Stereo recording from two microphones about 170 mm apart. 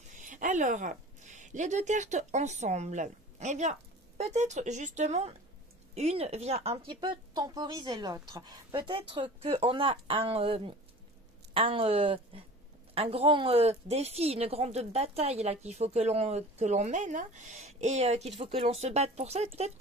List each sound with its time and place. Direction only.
0.1 s a woman's voice: 50° right (ahead or behind)